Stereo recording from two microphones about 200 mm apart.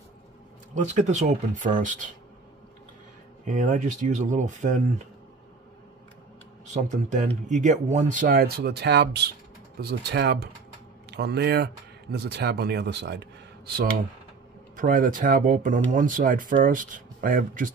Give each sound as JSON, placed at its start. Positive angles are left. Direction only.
{"t": 0.7, "sound": "speech", "side_deg": -35}
{"t": 3.4, "sound": "speech", "side_deg": -40}
{"t": 6.7, "sound": "speech", "side_deg": -40}
{"t": 14.8, "sound": "speech", "side_deg": -45}